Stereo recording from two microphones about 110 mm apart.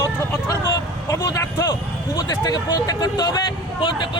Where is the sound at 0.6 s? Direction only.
35° left (ahead or behind).